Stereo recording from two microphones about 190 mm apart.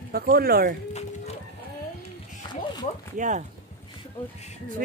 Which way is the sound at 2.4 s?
20° left (ahead or behind).